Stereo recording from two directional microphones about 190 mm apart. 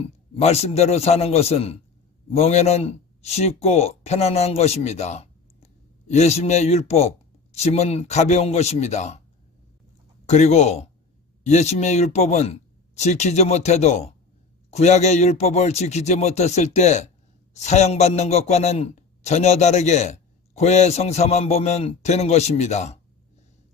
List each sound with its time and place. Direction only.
0.4 s a man's voice: 35° left (ahead or behind)
10.2 s a man's voice: 35° left (ahead or behind)